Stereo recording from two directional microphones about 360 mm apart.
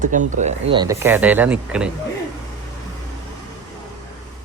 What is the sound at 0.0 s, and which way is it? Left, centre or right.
Speech, right.